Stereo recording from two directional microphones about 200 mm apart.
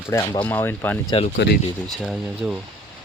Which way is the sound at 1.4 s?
60° left (ahead or behind).